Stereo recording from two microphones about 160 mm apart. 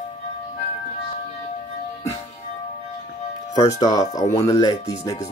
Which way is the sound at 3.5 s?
20° left (ahead or behind).